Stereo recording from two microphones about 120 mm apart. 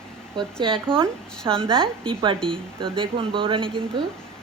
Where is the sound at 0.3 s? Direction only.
45° right (ahead or behind).